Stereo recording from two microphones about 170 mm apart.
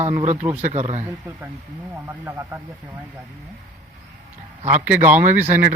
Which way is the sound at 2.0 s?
15° right (ahead or behind).